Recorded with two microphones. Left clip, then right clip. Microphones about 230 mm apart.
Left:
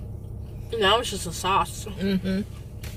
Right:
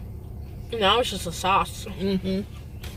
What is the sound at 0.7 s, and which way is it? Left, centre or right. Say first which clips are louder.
Speech: even; centre.